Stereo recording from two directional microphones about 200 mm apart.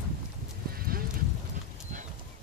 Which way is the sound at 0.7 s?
45° right (ahead or behind).